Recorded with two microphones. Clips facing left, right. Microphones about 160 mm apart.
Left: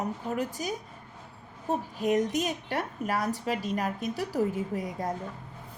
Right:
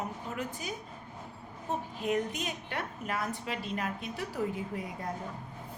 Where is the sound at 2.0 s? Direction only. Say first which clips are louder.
Left 6 dB; 40° left (ahead or behind).